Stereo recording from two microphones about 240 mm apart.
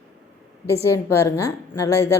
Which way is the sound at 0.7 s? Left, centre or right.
Centre.